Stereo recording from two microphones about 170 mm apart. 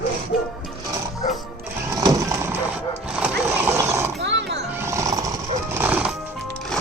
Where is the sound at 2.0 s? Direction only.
20° right (ahead or behind).